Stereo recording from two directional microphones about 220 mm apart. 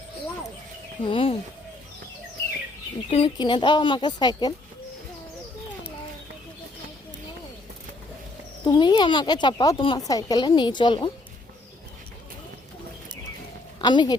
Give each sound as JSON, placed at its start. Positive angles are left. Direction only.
{"t": 1.0, "sound": "speech", "side_deg": 25}
{"t": 3.1, "sound": "speech", "side_deg": 25}
{"t": 8.6, "sound": "speech", "side_deg": 20}
{"t": 13.7, "sound": "speech", "side_deg": 20}